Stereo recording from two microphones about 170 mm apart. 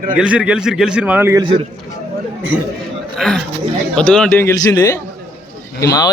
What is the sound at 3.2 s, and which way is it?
A man's voice, 5° left (ahead or behind).